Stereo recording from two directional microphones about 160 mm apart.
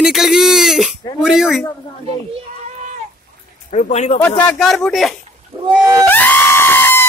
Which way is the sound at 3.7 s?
45° left (ahead or behind).